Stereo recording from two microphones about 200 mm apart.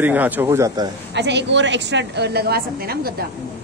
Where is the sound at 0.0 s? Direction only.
10° right (ahead or behind).